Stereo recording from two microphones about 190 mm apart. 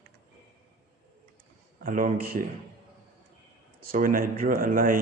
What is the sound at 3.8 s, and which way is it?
Speech, 45° right (ahead or behind).